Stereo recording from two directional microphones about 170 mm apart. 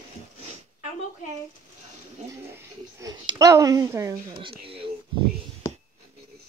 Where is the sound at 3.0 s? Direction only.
20° right (ahead or behind).